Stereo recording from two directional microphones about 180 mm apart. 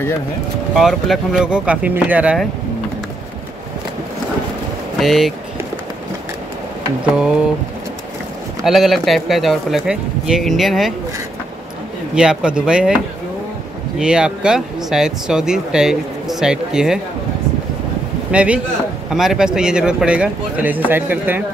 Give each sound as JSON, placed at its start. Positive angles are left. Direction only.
{"t": 0.7, "sound": "speech", "side_deg": 0}
{"t": 4.9, "sound": "speech", "side_deg": 0}
{"t": 8.6, "sound": "speech", "side_deg": 0}
{"t": 12.2, "sound": "speech", "side_deg": -5}
{"t": 18.3, "sound": "a man's voice", "side_deg": -5}